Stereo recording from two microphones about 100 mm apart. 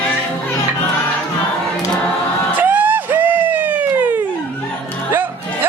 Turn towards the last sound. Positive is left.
turn(degrees=-20)  # may be behind; listen again after turning